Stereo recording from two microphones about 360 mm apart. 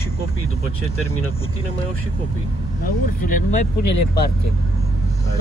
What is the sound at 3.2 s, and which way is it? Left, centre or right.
Speech, left.